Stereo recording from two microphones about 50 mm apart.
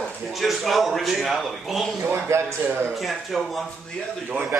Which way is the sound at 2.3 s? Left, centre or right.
Right.